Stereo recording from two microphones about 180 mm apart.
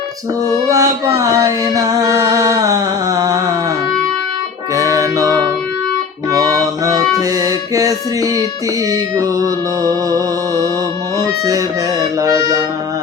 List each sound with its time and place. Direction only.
0.4 s music: 20° right (ahead or behind)
4.7 s music: 20° right (ahead or behind)